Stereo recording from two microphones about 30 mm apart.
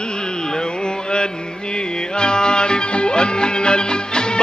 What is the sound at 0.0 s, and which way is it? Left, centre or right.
Carnatic music, left.